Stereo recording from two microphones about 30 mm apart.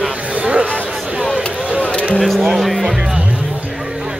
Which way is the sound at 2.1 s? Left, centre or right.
Centre.